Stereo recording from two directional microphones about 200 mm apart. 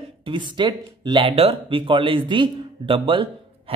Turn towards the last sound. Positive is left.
turn(degrees=-25)  # may be behind; listen again after turning